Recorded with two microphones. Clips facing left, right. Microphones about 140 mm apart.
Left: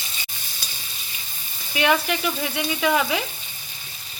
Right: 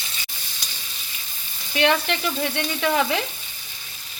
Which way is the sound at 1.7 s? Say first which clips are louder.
Even; 5° left (ahead or behind).